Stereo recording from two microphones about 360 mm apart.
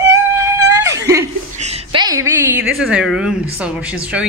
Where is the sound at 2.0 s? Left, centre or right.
Centre.